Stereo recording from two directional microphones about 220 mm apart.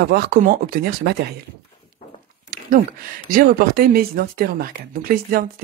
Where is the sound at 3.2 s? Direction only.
40° right (ahead or behind).